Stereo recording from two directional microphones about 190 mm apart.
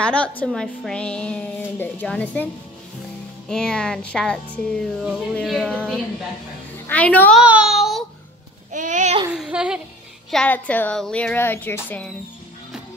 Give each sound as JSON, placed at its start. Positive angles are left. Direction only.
{"t": 0.0, "sound": "speech", "side_deg": 5}
{"t": 7.4, "sound": "child singing", "side_deg": -5}
{"t": 8.7, "sound": "babbling", "side_deg": -40}
{"t": 9.3, "sound": "speech", "side_deg": -5}
{"t": 10.3, "sound": "speech", "side_deg": 5}